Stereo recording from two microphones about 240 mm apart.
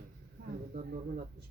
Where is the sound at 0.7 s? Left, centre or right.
Right.